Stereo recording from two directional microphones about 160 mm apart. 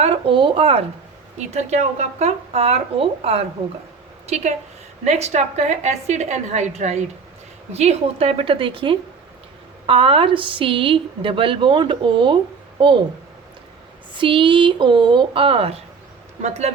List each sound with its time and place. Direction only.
0.0 s a woman's voice: 35° right (ahead or behind)
5.0 s a woman's voice: 40° right (ahead or behind)
14.1 s a woman's voice: 30° right (ahead or behind)